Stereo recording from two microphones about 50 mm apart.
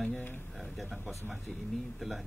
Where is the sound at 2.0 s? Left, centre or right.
Centre.